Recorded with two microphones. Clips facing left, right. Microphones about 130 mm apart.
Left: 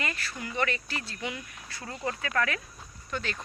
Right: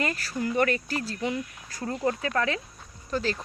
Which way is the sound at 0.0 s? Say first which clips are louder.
Right 7 dB; 40° right (ahead or behind).